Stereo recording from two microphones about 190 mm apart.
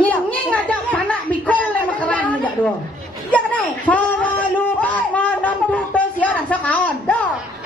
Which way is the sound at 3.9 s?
5° left (ahead or behind).